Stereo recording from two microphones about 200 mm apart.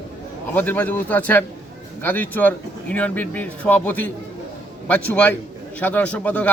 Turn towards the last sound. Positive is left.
turn(degrees=5)  # may be behind; listen again after turning